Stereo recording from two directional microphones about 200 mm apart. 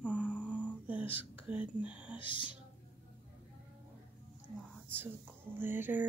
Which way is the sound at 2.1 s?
25° left (ahead or behind).